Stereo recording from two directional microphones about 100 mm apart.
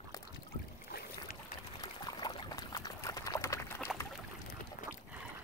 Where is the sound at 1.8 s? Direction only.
45° left (ahead or behind); by 3.9 s 25° left (ahead or behind).